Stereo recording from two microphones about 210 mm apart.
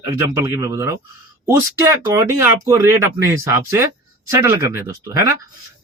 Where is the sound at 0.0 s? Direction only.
15° right (ahead or behind).